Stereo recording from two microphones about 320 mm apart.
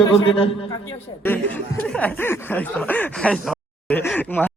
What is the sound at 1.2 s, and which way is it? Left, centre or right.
Speech, centre.